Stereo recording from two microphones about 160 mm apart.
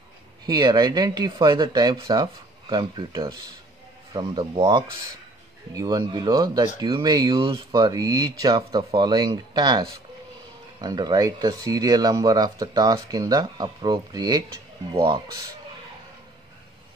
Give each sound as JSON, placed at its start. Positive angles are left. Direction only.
{"t": 0.5, "sound": "speech", "side_deg": -25}